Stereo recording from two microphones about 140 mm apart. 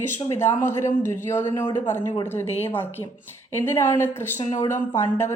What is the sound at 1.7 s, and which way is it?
Speech, 65° left (ahead or behind).